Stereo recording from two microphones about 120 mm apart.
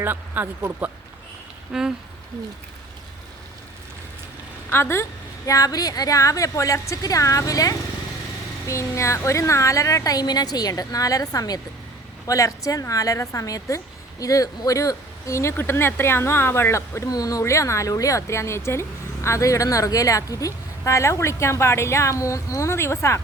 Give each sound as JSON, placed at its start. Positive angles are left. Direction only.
{"t": 0.0, "sound": "speech", "side_deg": -15}
{"t": 4.7, "sound": "a woman's voice", "side_deg": 20}